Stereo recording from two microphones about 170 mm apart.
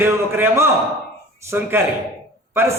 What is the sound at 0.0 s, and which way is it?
A man's voice, 10° right (ahead or behind).